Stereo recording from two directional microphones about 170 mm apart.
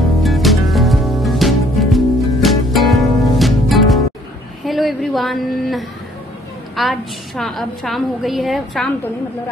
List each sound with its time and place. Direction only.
0.2 s music: centre (ahead or behind)
4.6 s a sound: centre (ahead or behind)
6.7 s a woman's voice: centre (ahead or behind)